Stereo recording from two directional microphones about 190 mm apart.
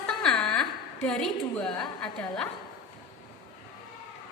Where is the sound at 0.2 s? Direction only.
Centre (ahead or behind).